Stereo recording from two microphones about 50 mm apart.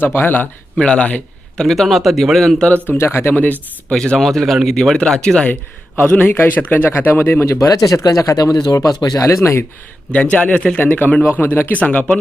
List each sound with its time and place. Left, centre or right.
0.0 s speech: left
0.8 s speech: centre
1.5 s a man's voice: centre
3.0 s speech: left
3.3 s a man's voice: left
3.9 s speech: centre
4.2 s a man's voice: centre
6.0 s a man's voice: left
7.4 s speech: left
10.1 s speech: left
10.8 s a man's voice: left
11.8 s speech: left